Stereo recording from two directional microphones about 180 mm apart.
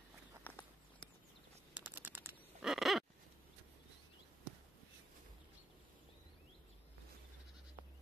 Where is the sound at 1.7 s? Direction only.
10° right (ahead or behind).